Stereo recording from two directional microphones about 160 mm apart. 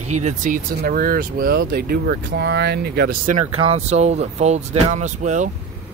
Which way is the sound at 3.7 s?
45° right (ahead or behind).